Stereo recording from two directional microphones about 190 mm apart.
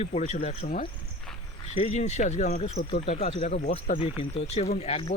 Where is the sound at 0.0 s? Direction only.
35° left (ahead or behind).